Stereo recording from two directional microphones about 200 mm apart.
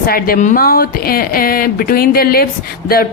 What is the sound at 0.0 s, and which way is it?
Speech, 45° left (ahead or behind).